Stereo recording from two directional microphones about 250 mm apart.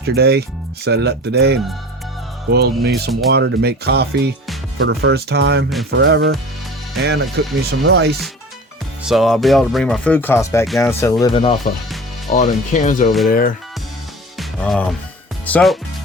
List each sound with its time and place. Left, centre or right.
0.0 s speech: right
9.0 s speech: centre
12.3 s speech: left
14.3 s music: centre
15.4 s speech: centre